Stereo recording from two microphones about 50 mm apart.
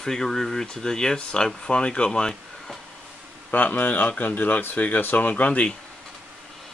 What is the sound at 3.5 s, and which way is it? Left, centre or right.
Speech, left.